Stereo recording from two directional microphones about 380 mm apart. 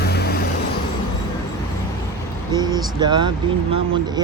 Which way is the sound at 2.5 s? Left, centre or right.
Centre.